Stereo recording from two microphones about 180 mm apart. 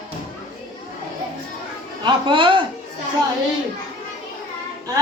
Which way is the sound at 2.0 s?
25° right (ahead or behind).